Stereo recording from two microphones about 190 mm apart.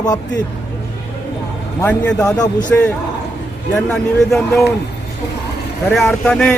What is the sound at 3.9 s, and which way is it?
Speech, centre (ahead or behind).